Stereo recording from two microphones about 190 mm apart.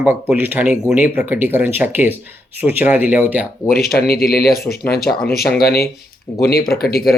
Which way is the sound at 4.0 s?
50° left (ahead or behind).